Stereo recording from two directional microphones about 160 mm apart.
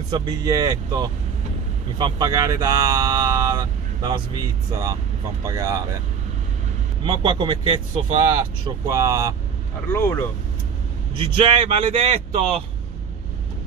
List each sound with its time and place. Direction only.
0.1 s speech: 25° right (ahead or behind)
5.5 s speech: 20° right (ahead or behind)
7.1 s speech: 35° right (ahead or behind)
9.8 s speech: 15° left (ahead or behind)
11.1 s speech: 35° right (ahead or behind)